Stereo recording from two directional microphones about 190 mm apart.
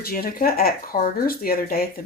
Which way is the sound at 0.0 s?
50° left (ahead or behind).